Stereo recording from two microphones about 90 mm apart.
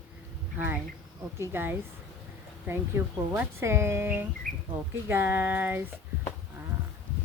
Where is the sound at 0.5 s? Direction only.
20° right (ahead or behind).